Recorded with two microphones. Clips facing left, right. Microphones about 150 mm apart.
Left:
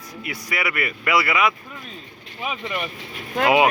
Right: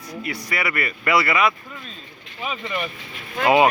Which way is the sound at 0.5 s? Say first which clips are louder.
Left 1 dB; 10° left (ahead or behind).